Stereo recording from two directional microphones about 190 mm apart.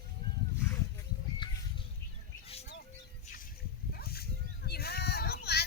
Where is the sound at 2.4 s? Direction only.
30° left (ahead or behind).